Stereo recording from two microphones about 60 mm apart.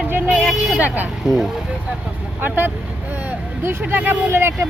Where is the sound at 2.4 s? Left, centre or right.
Right.